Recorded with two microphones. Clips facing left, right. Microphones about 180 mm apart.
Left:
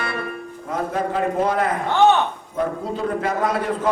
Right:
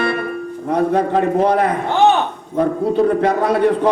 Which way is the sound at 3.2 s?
65° right (ahead or behind).